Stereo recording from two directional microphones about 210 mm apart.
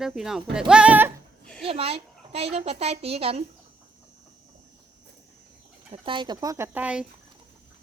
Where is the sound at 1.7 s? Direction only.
25° right (ahead or behind).